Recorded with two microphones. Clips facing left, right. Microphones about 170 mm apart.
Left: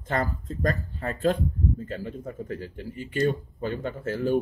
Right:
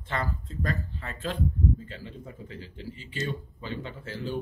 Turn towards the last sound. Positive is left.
turn(degrees=50)  # may be behind; listen again after turning